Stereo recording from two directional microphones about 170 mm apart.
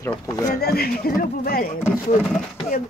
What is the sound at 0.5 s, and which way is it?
Speech, 65° left (ahead or behind).